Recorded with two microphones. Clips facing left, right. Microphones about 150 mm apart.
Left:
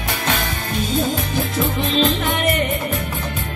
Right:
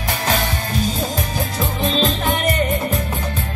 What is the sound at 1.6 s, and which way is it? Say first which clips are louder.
Music: left 1 dB; 35° right (ahead or behind).